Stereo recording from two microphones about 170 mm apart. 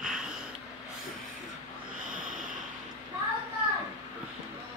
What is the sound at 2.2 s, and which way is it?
Snort, 50° right (ahead or behind).